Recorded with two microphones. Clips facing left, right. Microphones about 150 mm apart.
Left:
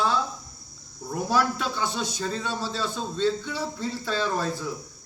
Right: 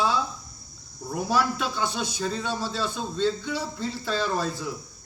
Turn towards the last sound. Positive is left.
turn(degrees=-5)  # may be behind; listen again after turning